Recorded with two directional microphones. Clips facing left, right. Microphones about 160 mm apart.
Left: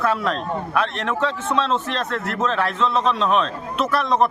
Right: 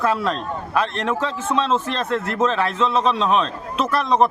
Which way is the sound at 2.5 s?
Centre (ahead or behind).